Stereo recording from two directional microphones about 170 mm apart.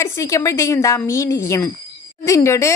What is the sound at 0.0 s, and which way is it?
Speech, 15° left (ahead or behind).